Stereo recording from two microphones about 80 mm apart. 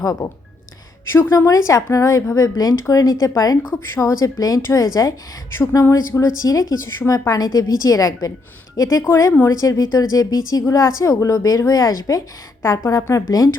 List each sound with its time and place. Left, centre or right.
0.0 s speech: left
1.0 s a woman's voice: left
1.5 s speech: left
5.8 s a woman's voice: left